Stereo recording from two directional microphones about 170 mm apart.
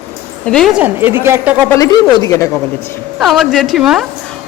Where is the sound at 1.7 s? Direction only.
20° left (ahead or behind).